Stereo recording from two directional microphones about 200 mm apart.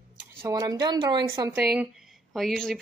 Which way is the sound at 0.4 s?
15° right (ahead or behind).